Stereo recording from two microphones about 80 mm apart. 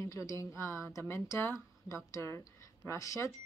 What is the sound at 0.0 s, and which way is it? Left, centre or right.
Speech, left.